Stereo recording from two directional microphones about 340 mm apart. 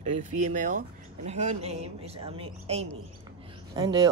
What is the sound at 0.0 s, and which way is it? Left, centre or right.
Speech, right.